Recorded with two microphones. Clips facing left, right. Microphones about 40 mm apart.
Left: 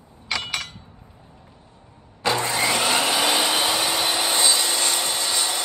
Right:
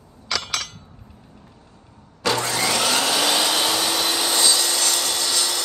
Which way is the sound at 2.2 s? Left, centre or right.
Left.